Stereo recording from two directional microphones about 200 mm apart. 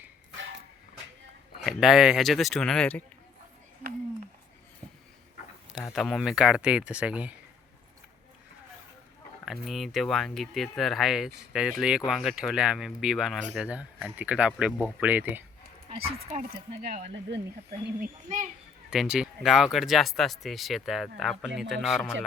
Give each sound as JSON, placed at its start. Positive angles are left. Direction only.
{"t": 1.6, "sound": "speech", "side_deg": 0}
{"t": 5.7, "sound": "speech", "side_deg": 0}
{"t": 9.5, "sound": "speech", "side_deg": 0}
{"t": 16.3, "sound": "a child's voice", "side_deg": -45}
{"t": 18.9, "sound": "speech", "side_deg": -5}